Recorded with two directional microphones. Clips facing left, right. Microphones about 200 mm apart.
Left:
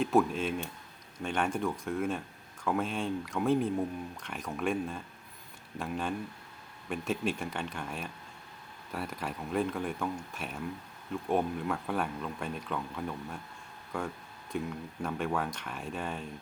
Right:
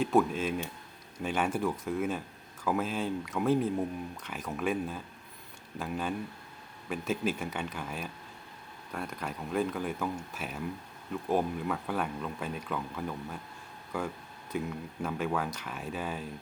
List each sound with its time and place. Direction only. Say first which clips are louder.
0.0 s speech: even; centre (ahead or behind)